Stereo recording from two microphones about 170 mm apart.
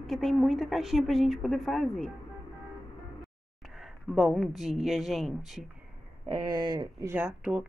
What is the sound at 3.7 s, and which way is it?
Speech, centre (ahead or behind).